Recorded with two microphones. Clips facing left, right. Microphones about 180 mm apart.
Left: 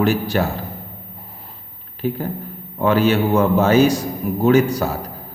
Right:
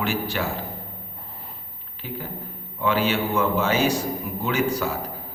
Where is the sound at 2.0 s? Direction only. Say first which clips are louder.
Left 10 dB; 45° left (ahead or behind).